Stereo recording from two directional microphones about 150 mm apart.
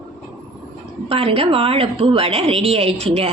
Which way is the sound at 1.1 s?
40° right (ahead or behind).